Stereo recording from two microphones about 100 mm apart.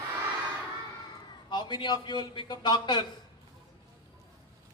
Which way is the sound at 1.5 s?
50° left (ahead or behind).